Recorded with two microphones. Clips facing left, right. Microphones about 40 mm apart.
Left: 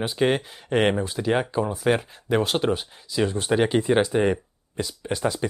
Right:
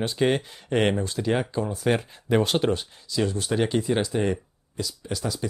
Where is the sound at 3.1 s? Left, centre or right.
Left.